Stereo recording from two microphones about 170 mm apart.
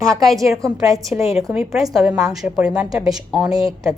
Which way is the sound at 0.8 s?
20° right (ahead or behind).